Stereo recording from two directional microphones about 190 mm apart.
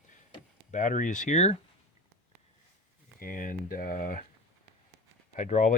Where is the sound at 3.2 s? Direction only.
45° left (ahead or behind).